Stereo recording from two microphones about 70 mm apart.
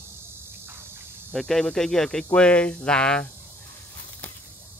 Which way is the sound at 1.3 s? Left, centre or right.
Centre.